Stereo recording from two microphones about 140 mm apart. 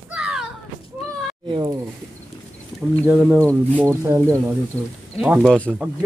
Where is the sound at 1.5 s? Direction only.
35° right (ahead or behind).